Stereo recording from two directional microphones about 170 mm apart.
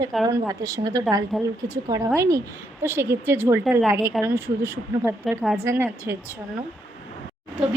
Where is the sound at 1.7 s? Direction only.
20° right (ahead or behind).